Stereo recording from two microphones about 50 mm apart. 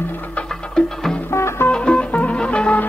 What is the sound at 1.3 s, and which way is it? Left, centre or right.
Music, left.